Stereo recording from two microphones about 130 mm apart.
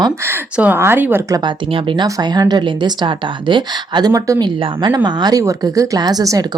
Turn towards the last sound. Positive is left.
turn(degrees=-30)  # may be behind; listen again after turning